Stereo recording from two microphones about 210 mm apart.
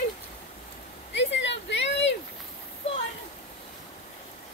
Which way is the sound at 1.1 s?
60° left (ahead or behind).